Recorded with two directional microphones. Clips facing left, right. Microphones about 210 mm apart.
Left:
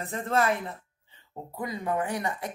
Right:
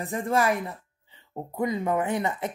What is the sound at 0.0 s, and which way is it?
Speech, 15° right (ahead or behind).